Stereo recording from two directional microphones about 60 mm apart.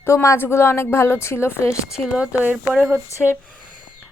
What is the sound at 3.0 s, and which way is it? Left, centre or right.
Speech, left.